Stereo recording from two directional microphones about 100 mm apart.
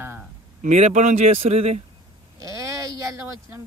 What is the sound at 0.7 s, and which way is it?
Speech, 90° right.